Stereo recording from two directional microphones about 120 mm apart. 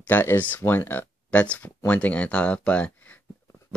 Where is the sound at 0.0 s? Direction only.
20° left (ahead or behind).